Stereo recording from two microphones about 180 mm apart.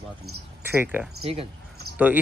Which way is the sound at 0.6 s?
10° right (ahead or behind).